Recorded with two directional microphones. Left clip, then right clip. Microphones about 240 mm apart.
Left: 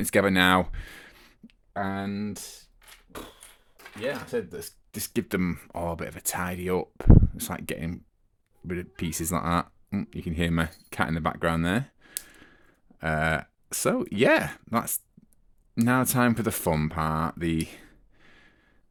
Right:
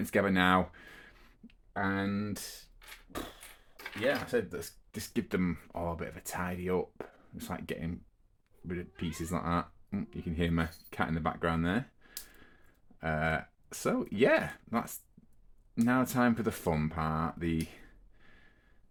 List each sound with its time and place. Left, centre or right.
0.0 s speech: left
3.9 s speech: centre
4.4 s speech: left